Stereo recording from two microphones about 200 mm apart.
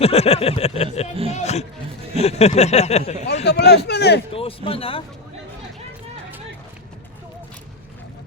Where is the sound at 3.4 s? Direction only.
55° left (ahead or behind).